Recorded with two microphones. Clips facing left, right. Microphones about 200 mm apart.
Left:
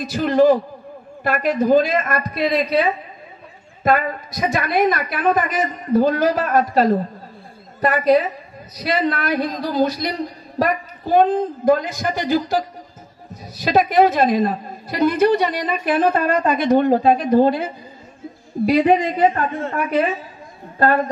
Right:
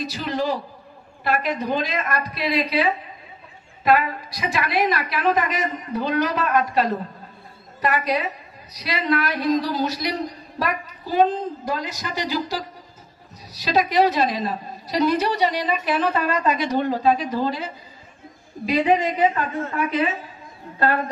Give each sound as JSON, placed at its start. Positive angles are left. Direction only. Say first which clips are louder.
{"t": 0.0, "sound": "a man's voice", "louder": "left 10 dB", "side_deg": 50}